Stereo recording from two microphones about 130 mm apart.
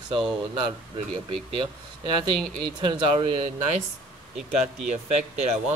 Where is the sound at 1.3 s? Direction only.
45° right (ahead or behind).